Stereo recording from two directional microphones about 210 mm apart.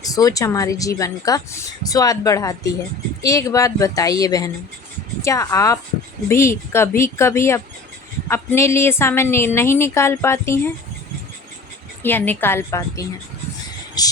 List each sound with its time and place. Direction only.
0.0 s speech: 15° left (ahead or behind)
12.0 s speech: 10° left (ahead or behind)